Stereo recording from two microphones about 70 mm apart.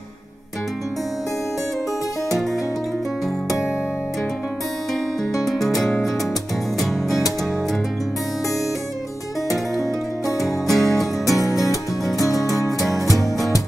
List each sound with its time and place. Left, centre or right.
5.4 s music: centre
10.4 s music: centre
11.2 s music: left
12.7 s music: centre